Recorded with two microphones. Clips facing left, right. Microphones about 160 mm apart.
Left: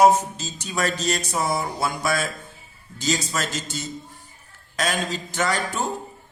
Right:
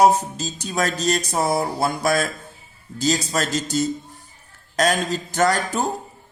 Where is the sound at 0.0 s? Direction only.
40° right (ahead or behind).